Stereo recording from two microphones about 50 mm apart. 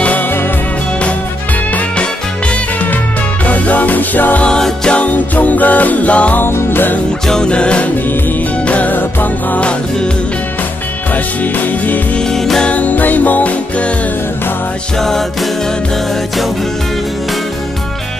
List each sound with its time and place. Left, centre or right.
3.4 s music: left
4.5 s music: centre
4.9 s music: left
6.4 s music: left
7.2 s music: centre; by 9.6 s left
9.6 s music: left
11.5 s music: left
12.2 s music: centre
12.6 s music: left
15.0 s music: centre